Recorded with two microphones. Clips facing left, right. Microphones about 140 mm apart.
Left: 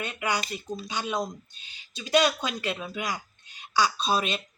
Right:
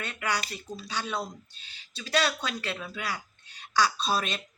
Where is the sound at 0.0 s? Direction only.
15° left (ahead or behind).